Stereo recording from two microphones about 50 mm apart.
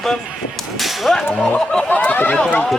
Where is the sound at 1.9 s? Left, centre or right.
Left.